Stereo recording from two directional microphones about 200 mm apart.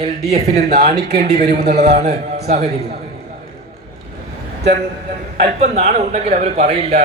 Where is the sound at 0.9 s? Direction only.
50° right (ahead or behind).